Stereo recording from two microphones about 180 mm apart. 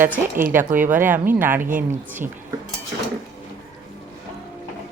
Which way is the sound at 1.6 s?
50° right (ahead or behind).